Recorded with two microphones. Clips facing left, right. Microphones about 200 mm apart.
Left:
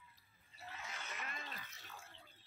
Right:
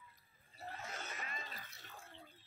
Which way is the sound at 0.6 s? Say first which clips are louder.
Right 4 dB; 40° right (ahead or behind).